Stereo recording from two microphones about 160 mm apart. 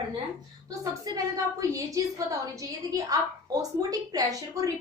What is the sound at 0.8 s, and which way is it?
A woman's voice, 20° right (ahead or behind).